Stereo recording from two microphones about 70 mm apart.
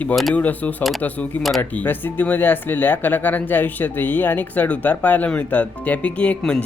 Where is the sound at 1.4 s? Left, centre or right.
Centre.